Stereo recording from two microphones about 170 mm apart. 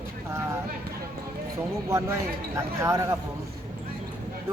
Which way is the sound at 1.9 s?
15° right (ahead or behind).